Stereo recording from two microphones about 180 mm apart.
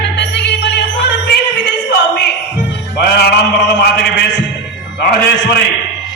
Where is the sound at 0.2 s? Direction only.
70° left (ahead or behind).